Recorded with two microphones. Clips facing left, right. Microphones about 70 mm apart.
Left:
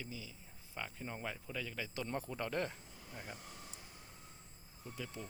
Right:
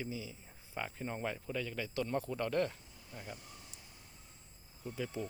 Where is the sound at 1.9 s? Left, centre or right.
Centre.